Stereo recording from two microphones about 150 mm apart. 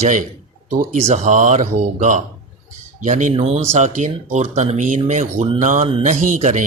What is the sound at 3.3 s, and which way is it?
Speech, 40° right (ahead or behind).